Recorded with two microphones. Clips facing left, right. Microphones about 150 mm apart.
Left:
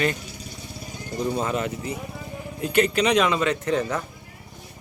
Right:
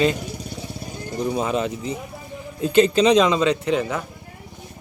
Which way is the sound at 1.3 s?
15° right (ahead or behind).